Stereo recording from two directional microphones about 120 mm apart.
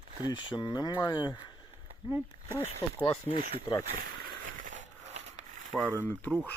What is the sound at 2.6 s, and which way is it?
Speech, 55° left (ahead or behind).